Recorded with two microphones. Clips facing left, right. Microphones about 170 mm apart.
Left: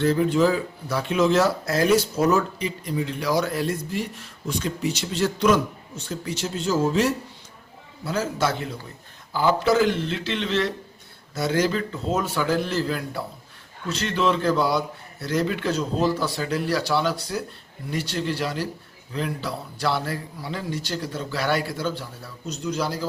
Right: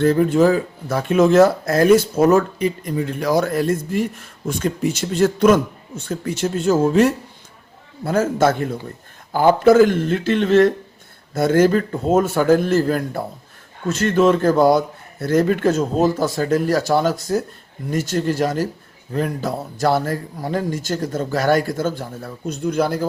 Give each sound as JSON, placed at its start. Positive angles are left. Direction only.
{"t": 0.0, "sound": "speech", "side_deg": -50}